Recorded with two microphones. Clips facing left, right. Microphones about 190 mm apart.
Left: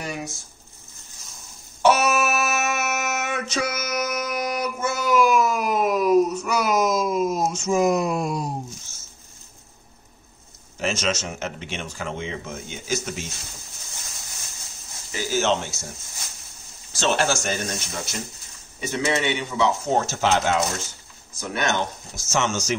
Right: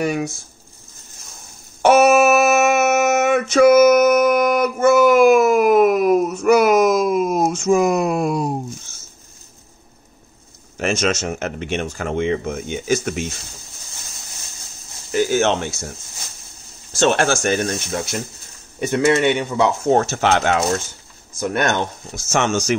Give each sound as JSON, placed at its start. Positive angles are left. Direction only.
{"t": 0.0, "sound": "speech", "side_deg": -60}
{"t": 1.8, "sound": "a sound", "side_deg": -55}
{"t": 10.8, "sound": "speech", "side_deg": -50}
{"t": 15.0, "sound": "speech", "side_deg": -55}
{"t": 16.9, "sound": "speech", "side_deg": -50}